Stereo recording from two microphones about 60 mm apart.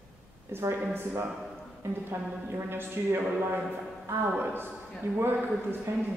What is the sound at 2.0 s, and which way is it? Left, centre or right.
A woman's voice, right.